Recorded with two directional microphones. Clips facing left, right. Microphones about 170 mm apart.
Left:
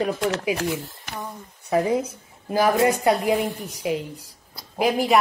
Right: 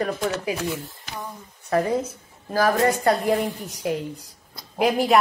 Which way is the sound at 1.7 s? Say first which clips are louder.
Left 1 dB; 10° left (ahead or behind).